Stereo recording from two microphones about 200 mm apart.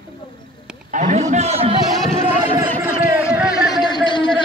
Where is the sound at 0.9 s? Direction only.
40° right (ahead or behind).